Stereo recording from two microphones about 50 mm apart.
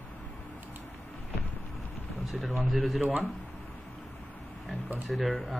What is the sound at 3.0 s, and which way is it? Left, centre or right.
Speech, right.